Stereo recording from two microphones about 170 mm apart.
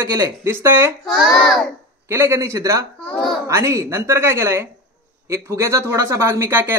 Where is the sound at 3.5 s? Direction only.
15° right (ahead or behind).